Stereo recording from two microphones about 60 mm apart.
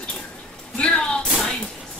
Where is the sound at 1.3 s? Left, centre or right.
Centre.